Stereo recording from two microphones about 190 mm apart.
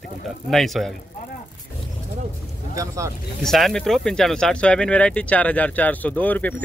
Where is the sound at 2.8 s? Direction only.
15° right (ahead or behind).